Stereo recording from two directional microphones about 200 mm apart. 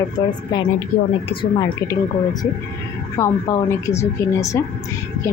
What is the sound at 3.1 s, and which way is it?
Speech, 15° left (ahead or behind).